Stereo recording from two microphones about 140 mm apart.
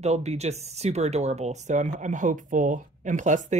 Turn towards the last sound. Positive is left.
turn(degrees=-60)  # may be behind; listen again after turning